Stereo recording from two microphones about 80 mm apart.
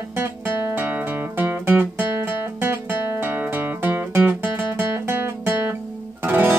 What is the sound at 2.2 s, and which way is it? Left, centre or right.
Guitar, right.